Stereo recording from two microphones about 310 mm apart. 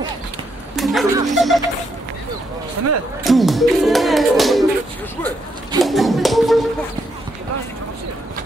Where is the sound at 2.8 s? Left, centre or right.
Right.